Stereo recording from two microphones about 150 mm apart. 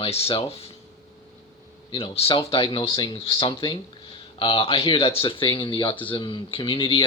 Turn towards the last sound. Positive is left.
turn(degrees=35)  # may be behind; listen again after turning